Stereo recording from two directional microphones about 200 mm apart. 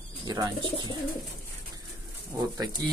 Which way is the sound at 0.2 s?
20° right (ahead or behind).